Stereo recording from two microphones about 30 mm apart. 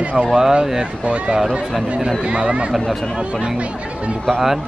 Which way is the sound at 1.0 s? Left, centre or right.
Right.